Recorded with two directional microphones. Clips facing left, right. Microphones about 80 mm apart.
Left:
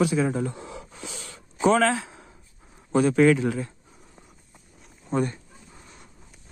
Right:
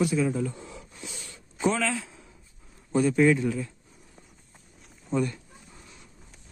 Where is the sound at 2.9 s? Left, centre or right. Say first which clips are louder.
Left 3 dB; left.